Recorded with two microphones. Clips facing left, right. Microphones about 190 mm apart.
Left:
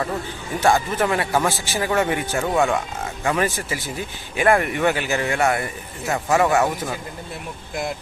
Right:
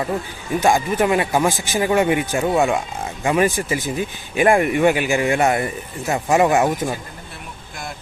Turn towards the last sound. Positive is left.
turn(degrees=-20)  # may be behind; listen again after turning